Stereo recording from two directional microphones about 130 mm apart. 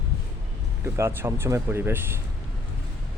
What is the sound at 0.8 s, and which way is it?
Speech, 20° right (ahead or behind).